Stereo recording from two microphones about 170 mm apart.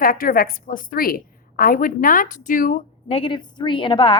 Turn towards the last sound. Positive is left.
turn(degrees=30)  # may be behind; listen again after turning